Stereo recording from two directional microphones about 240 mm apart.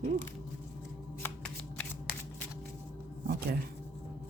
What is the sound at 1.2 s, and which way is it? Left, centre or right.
Shuffling cards, centre.